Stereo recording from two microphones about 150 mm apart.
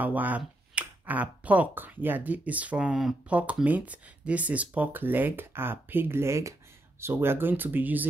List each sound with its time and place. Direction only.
0.0 s speech: 10° right (ahead or behind)